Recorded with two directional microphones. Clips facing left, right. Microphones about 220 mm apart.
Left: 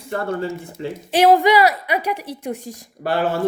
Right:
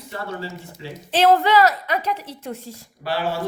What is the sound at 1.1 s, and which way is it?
A woman's voice, 15° left (ahead or behind).